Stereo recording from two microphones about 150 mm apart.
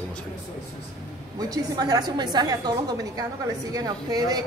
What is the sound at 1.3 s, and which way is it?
A woman's voice, 25° right (ahead or behind).